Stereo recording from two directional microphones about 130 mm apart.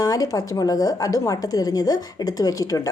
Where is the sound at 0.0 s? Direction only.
30° left (ahead or behind).